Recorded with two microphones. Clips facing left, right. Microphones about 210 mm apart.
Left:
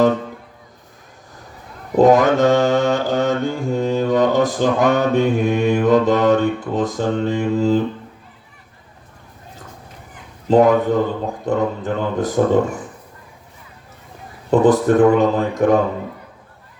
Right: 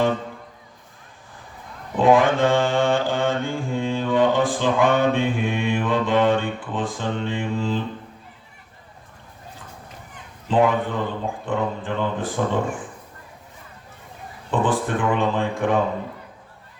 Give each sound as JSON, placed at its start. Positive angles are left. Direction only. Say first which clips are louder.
{"t": 2.0, "sound": "mantra", "louder": "left 4 dB", "side_deg": 40}
{"t": 10.5, "sound": "mantra", "louder": "left 7 dB", "side_deg": 40}
{"t": 14.5, "sound": "mantra", "louder": "left 9 dB", "side_deg": 40}